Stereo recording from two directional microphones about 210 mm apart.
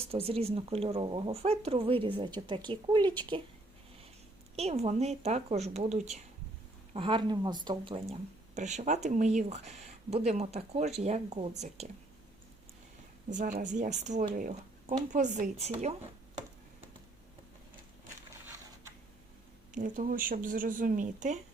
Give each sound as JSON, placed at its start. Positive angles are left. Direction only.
{"t": 0.1, "sound": "speech", "side_deg": -30}
{"t": 4.5, "sound": "speech", "side_deg": -30}
{"t": 13.3, "sound": "speech", "side_deg": -40}
{"t": 19.7, "sound": "speech", "side_deg": -40}